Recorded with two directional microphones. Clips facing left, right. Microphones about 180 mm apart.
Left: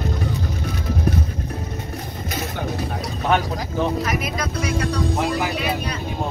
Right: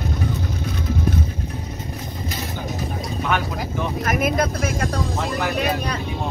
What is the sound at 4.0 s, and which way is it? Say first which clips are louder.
Speech: right 4 dB; 50° right (ahead or behind).